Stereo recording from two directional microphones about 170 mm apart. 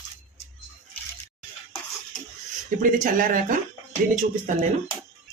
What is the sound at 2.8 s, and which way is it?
Speech, 50° right (ahead or behind).